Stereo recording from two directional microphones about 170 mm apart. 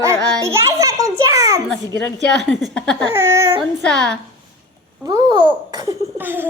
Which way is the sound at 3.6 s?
Centre (ahead or behind).